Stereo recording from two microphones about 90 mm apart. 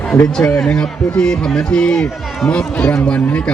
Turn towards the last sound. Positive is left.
turn(degrees=10)  # may be behind; listen again after turning